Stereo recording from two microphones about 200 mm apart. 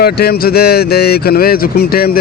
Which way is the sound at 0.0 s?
50° left (ahead or behind).